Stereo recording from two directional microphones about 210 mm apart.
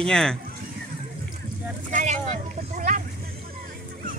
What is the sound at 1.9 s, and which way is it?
Vehicle, 35° right (ahead or behind).